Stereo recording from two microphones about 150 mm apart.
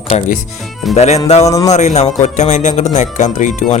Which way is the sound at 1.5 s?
20° left (ahead or behind).